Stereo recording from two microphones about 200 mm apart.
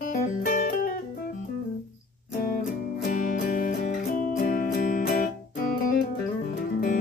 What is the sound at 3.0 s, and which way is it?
Music, 40° left (ahead or behind).